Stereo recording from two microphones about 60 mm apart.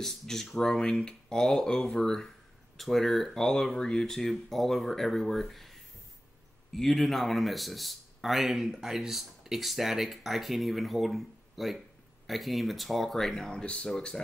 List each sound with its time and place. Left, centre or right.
0.0 s speech: centre
13.5 s speech: centre